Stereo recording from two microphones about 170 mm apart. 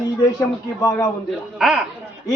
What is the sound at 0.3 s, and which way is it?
Speech, 20° left (ahead or behind).